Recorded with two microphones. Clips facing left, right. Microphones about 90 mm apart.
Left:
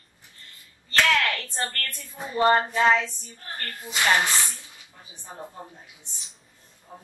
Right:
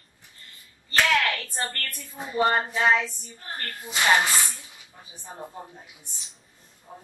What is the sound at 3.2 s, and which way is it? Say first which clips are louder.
Speech: right 1 dB; 20° right (ahead or behind).